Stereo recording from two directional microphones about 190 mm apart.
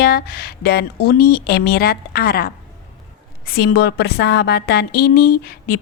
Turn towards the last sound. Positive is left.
turn(degrees=50)  # may be behind; listen again after turning